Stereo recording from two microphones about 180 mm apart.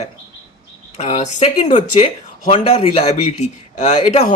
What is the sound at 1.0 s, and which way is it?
Speech, 35° left (ahead or behind).